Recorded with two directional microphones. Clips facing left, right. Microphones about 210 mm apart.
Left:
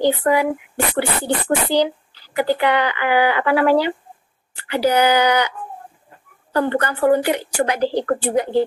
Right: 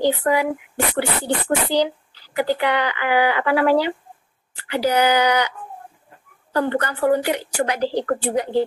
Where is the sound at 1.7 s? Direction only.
55° left (ahead or behind).